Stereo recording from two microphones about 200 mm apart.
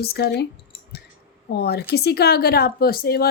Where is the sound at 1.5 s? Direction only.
55° left (ahead or behind).